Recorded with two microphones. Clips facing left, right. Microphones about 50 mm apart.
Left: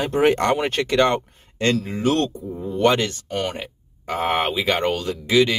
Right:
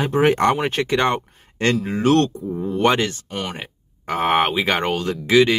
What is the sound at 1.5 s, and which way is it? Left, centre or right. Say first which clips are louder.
Speech: right 1 dB; right.